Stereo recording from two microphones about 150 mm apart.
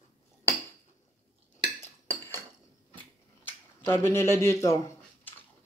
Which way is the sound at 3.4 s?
15° left (ahead or behind).